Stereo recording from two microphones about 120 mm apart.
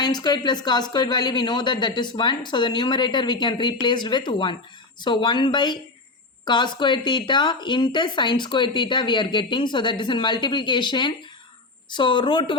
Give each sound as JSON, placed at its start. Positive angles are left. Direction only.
{"t": 0.0, "sound": "speech", "side_deg": 35}